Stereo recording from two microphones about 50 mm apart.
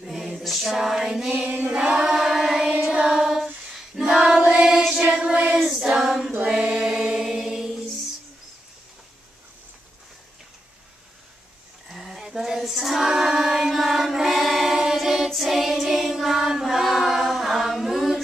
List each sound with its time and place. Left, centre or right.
0.0 s a capella: centre
0.7 s female singing: centre
1.7 s choir: centre
2.0 s music: centre
3.1 s female singing: centre
3.9 s child singing: centre
4.5 s choir: centre
5.0 s music: centre
5.6 s female singing: centre
6.7 s chant: centre
11.9 s child singing: centre
15.2 s choir: centre